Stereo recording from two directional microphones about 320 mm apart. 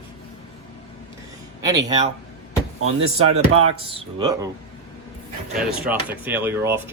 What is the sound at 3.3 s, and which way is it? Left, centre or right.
Speech, right.